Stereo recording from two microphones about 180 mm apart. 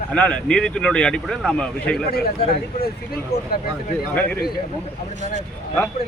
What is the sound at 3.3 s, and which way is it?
Speech, 60° left (ahead or behind).